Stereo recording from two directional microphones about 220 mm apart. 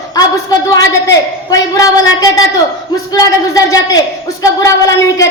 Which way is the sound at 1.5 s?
15° left (ahead or behind).